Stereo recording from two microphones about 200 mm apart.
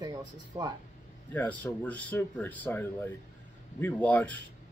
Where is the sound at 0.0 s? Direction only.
20° right (ahead or behind).